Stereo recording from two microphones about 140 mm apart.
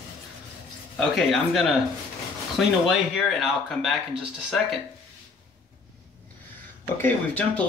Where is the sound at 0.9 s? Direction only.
Centre (ahead or behind).